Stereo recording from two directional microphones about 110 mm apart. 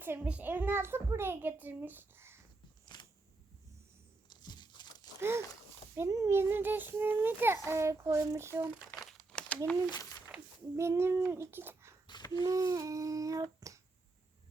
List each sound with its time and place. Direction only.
0.0 s a child's voice: 15° right (ahead or behind)
2.8 s a sound: 40° left (ahead or behind)
4.3 s tearing: 40° left (ahead or behind)
6.0 s a child's voice: 30° right (ahead or behind)
9.0 s crumpling: centre (ahead or behind)
9.9 s speech: 30° left (ahead or behind)
10.8 s a child's voice: 25° right (ahead or behind)
12.0 s a sound: 40° left (ahead or behind)
12.5 s humming: 30° right (ahead or behind)